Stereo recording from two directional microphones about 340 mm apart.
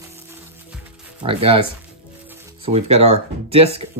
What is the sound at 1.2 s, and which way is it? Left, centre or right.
Speech, centre.